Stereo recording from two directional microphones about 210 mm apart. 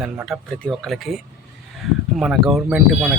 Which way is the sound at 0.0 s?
Centre (ahead or behind).